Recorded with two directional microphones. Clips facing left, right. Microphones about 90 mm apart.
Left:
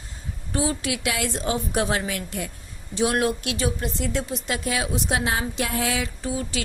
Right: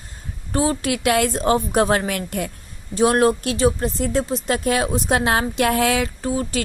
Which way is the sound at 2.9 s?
45° right (ahead or behind).